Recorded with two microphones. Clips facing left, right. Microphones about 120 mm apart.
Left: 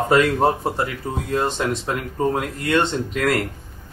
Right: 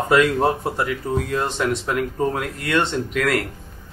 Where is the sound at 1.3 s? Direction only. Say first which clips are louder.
Left 5 dB; 30° left (ahead or behind).